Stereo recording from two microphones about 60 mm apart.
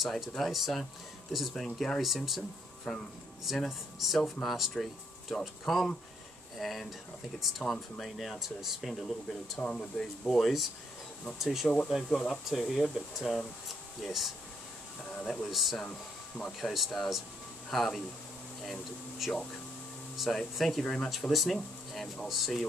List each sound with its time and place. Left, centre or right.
0.0 s speech: centre
9.6 s speech: centre
10.2 s speech: centre
12.0 s speech: centre
12.4 s speech: centre
13.7 s air conditioning: centre
15.0 s speech: centre
15.4 s speech: centre
15.8 s speech: centre
16.7 s speech: centre
21.3 s speech: centre